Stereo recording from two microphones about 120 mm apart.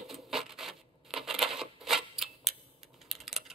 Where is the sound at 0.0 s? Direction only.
Centre (ahead or behind).